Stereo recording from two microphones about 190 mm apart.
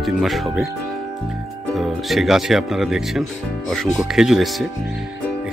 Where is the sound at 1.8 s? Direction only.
Centre (ahead or behind).